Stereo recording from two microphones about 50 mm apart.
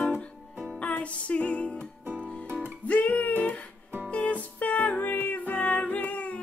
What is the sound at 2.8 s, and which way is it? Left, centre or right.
Music, left.